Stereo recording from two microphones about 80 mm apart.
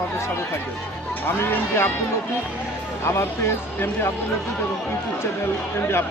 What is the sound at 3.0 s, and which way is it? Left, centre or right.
Speech, left.